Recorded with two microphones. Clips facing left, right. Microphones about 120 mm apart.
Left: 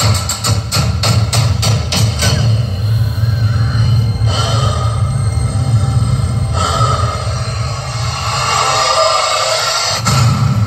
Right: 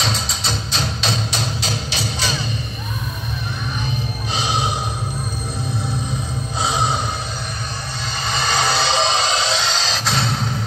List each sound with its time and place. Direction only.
0.0 s music: 60° left (ahead or behind); by 2.5 s 90° left
6.6 s music: 90° left
8.3 s music: 65° left (ahead or behind)